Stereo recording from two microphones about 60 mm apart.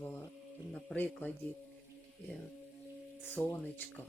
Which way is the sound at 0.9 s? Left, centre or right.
Left.